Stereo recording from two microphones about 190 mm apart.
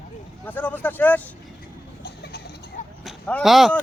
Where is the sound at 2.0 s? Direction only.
60° left (ahead or behind).